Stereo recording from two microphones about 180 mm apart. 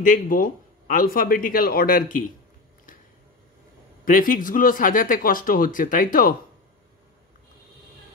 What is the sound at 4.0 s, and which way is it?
A man's voice, 50° left (ahead or behind).